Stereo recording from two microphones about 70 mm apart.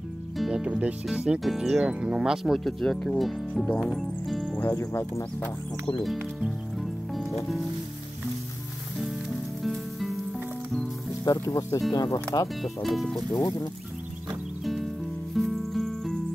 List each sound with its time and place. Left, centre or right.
0.4 s speech: centre
4.5 s music: left
4.7 s speech: left
6.8 s music: centre
9.6 s music: centre
11.3 s speech: left
11.9 s speech: left
12.6 s speech: centre
13.3 s speech: left
14.6 s music: centre